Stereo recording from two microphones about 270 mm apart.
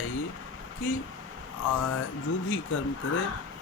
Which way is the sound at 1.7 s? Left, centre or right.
Left.